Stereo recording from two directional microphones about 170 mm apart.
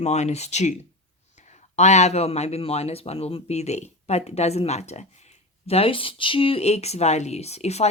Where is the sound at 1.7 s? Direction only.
40° left (ahead or behind).